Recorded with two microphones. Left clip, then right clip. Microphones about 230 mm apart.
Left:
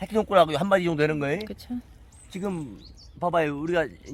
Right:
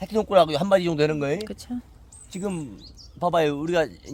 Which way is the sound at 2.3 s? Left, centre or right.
Right.